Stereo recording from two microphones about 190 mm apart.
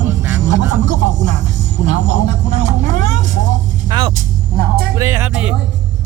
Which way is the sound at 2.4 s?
35° right (ahead or behind).